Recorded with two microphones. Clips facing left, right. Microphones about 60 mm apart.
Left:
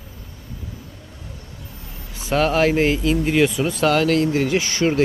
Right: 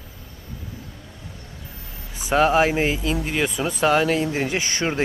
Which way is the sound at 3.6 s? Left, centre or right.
Centre.